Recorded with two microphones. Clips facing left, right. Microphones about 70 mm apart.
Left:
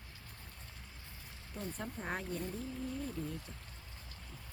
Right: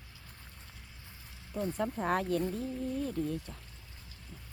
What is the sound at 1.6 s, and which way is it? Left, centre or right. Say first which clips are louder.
Speech: right 9 dB; right.